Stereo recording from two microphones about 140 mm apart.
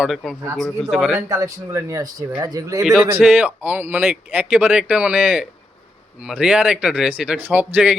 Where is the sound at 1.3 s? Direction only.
25° right (ahead or behind).